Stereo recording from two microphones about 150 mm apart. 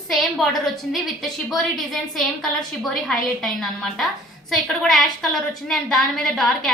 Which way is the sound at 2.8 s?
5° left (ahead or behind).